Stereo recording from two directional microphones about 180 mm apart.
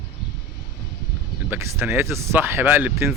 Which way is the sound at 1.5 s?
15° right (ahead or behind).